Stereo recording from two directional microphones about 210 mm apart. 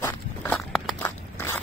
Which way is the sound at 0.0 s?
5° left (ahead or behind).